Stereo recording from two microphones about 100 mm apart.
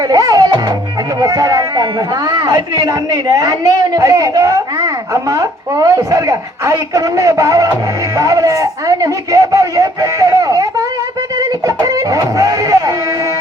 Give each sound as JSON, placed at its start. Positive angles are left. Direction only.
{"t": 0.1, "sound": "speech", "side_deg": -40}
{"t": 11.3, "sound": "music", "side_deg": -35}